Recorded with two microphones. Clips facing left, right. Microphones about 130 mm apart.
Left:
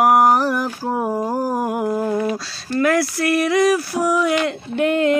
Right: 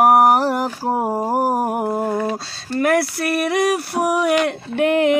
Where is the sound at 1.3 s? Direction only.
70° right (ahead or behind).